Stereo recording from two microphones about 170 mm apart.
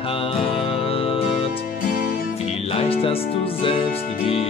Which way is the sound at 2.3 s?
35° left (ahead or behind).